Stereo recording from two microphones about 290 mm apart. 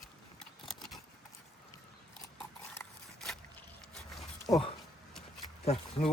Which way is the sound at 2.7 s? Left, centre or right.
Centre.